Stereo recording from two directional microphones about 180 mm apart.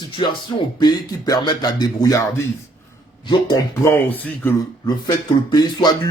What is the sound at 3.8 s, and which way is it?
Speech, 10° left (ahead or behind).